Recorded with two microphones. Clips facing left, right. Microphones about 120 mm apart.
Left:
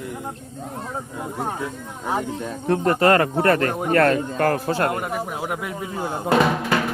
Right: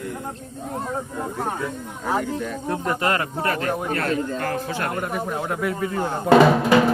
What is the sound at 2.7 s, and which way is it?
Speech, 50° left (ahead or behind).